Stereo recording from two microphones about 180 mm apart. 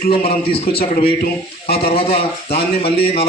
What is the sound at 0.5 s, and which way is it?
Speech, 30° left (ahead or behind).